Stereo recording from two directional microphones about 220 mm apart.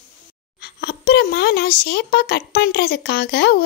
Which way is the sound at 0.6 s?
45° left (ahead or behind).